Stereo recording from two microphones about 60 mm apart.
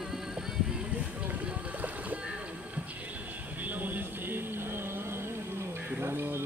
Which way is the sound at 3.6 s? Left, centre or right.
Right.